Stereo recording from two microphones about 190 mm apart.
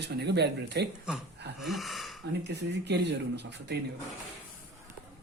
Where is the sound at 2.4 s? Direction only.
65° right (ahead or behind).